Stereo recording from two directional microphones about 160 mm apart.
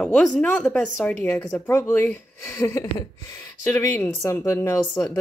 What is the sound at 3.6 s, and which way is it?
Speech, 15° left (ahead or behind).